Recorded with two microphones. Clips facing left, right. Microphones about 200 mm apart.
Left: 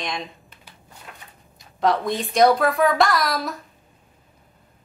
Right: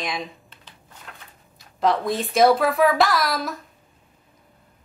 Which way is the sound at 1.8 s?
Centre (ahead or behind).